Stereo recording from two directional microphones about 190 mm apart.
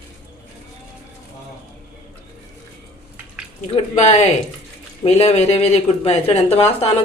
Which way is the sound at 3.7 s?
35° left (ahead or behind).